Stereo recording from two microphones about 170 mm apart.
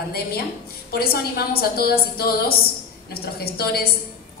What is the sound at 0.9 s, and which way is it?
A woman's voice, 65° left (ahead or behind).